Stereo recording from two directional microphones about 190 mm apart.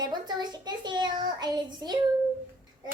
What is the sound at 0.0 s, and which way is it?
A child's voice, 20° right (ahead or behind).